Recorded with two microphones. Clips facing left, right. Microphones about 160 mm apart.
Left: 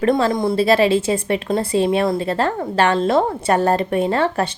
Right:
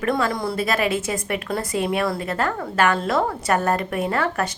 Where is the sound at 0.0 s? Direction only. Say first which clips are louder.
Left 6 dB; 25° left (ahead or behind).